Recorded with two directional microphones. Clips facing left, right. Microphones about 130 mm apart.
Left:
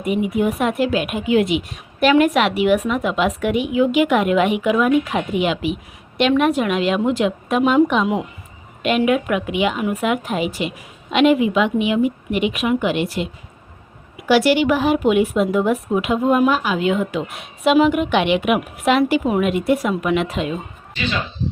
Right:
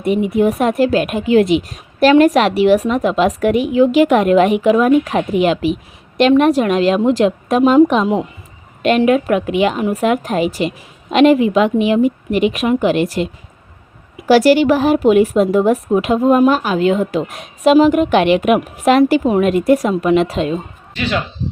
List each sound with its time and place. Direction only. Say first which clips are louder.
0.0 s a woman's voice: right 5 dB; 35° right (ahead or behind)
14.3 s speech: right 5 dB; 40° right (ahead or behind)